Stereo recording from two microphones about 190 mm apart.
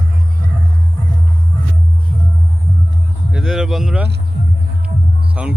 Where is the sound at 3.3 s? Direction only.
5° right (ahead or behind).